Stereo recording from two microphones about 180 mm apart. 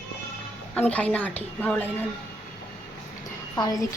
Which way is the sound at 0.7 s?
5° left (ahead or behind).